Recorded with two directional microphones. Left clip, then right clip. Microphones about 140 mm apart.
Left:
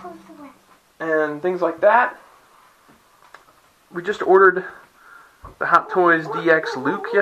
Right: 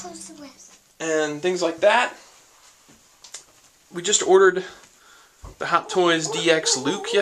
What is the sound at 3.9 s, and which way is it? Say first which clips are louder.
Speech: left 1 dB; 15° right (ahead or behind).